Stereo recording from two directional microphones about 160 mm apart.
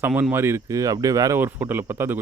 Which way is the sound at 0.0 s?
10° right (ahead or behind).